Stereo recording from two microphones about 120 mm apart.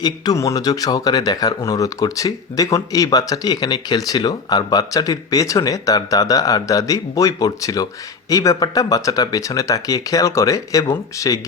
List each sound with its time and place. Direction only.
0.0 s speech: 30° left (ahead or behind)